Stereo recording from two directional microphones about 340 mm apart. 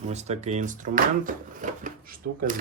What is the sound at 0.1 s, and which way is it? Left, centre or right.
Speech, centre.